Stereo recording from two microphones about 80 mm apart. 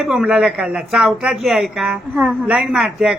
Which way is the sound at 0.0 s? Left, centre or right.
Centre.